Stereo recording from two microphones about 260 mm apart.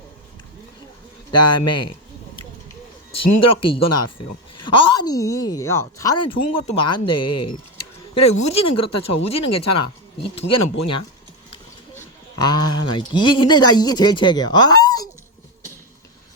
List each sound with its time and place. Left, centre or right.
1.3 s a woman's voice: centre
3.1 s speech: left
4.6 s a woman's voice: centre
7.2 s speech: left
8.3 s speech: left
8.6 s speech: left
11.9 s a man's voice: centre